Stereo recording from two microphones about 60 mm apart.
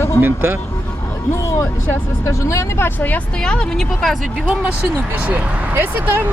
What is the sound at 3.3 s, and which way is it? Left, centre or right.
Speech, centre.